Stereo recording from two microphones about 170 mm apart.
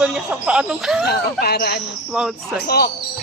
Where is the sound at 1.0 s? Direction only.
65° left (ahead or behind).